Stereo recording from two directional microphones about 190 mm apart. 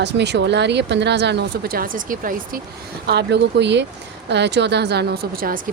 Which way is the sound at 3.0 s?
60° right (ahead or behind).